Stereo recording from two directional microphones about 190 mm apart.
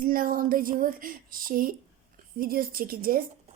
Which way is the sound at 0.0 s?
50° right (ahead or behind).